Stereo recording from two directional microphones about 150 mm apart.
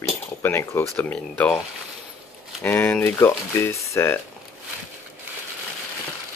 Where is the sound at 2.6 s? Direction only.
15° left (ahead or behind).